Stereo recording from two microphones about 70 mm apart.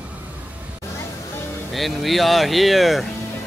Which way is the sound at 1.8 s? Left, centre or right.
Centre.